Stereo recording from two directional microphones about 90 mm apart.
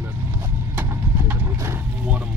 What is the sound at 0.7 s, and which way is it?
Horse, 25° right (ahead or behind).